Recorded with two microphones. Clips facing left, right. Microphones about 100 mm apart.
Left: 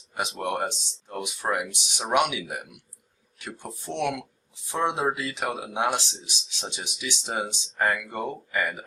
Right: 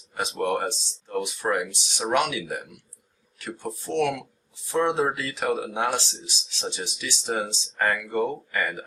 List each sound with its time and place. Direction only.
0.2 s speech: 15° left (ahead or behind)